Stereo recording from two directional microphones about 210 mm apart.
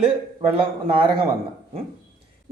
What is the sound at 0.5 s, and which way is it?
Speech, 25° right (ahead or behind).